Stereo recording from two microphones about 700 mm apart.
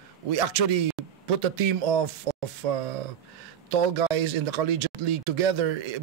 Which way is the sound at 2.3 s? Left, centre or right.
Right.